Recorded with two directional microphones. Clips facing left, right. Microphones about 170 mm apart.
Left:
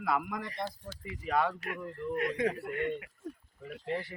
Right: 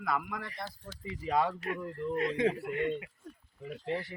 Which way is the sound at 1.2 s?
20° right (ahead or behind).